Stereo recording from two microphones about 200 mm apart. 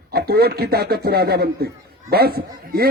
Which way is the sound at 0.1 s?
50° right (ahead or behind).